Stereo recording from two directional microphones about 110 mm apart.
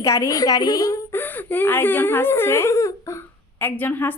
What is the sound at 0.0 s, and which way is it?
A woman's voice, 30° left (ahead or behind).